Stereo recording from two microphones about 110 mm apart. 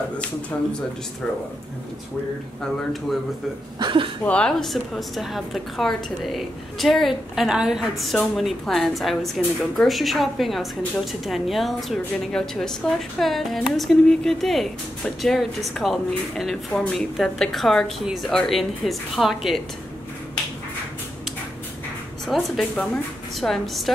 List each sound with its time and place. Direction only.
2.6 s a woman's voice: centre (ahead or behind)
3.8 s speech: 50° right (ahead or behind)
4.3 s a woman's voice: 10° left (ahead or behind)
22.2 s a woman's voice: 5° left (ahead or behind)